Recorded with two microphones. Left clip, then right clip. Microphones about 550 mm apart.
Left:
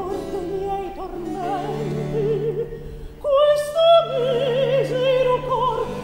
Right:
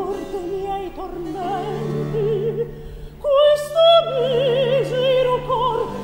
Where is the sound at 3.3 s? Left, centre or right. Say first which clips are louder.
Right 2 dB; right.